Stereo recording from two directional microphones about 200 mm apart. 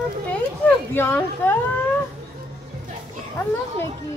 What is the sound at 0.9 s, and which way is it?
Speech, 10° left (ahead or behind).